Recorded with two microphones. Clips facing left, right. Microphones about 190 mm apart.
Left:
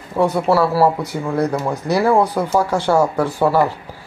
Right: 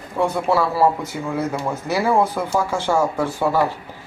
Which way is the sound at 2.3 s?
15° left (ahead or behind).